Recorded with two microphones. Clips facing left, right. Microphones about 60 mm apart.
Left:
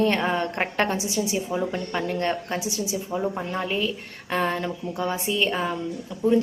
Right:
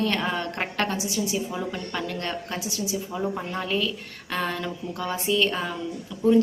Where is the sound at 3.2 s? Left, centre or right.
Centre.